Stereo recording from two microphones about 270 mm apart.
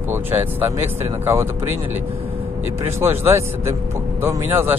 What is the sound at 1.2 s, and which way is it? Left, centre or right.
Speech, centre.